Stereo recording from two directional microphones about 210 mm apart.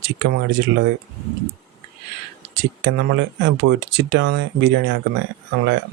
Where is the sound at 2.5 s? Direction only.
55° right (ahead or behind).